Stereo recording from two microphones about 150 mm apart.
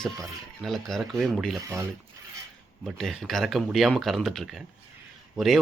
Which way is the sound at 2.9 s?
Centre (ahead or behind).